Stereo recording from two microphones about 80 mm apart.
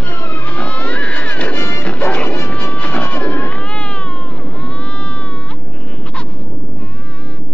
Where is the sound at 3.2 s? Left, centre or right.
Centre.